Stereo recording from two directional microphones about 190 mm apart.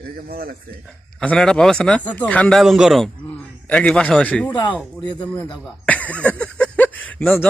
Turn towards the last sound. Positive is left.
turn(degrees=10)  # may be behind; listen again after turning